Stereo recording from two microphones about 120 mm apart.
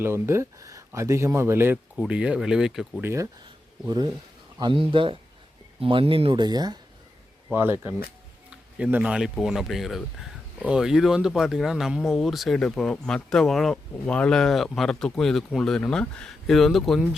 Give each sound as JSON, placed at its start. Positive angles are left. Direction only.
{"t": 0.0, "sound": "speech", "side_deg": -20}
{"t": 2.0, "sound": "speech", "side_deg": -10}
{"t": 3.0, "sound": "speech", "side_deg": -20}
{"t": 3.8, "sound": "speech", "side_deg": -35}
{"t": 6.4, "sound": "speech", "side_deg": -35}
{"t": 7.5, "sound": "speech", "side_deg": -15}